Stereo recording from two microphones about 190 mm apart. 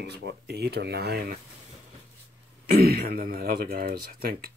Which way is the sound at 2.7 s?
55° right (ahead or behind).